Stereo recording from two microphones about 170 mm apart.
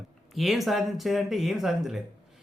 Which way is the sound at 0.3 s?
Centre (ahead or behind).